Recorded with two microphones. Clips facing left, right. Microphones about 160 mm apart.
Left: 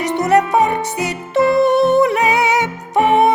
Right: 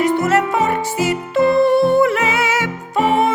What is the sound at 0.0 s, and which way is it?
Music, 20° left (ahead or behind).